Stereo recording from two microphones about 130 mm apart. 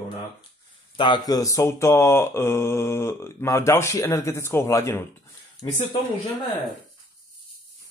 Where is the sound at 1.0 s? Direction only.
30° left (ahead or behind).